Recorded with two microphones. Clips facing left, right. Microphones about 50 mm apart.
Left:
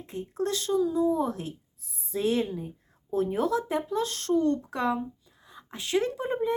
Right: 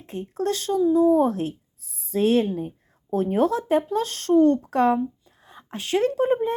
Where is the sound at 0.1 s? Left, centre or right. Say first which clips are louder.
Right 4 dB; right.